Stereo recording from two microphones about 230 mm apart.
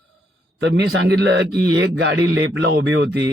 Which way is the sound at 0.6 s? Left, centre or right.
Right.